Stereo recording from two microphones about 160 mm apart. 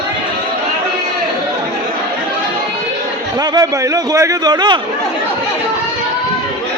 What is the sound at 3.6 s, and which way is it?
A man's voice, 20° right (ahead or behind).